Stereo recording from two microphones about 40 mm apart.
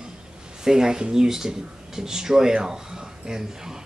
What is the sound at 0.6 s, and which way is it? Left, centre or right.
Speech, centre.